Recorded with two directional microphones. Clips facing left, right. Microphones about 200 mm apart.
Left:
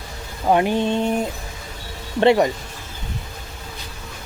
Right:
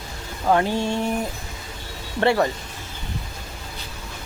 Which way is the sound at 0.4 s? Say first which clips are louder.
Left 2 dB; 15° left (ahead or behind).